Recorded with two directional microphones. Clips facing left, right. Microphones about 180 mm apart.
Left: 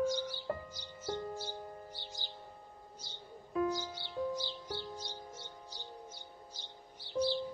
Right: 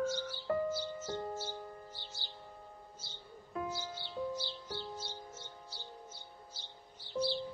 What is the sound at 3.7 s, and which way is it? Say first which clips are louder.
Music: left 2 dB; 15° left (ahead or behind).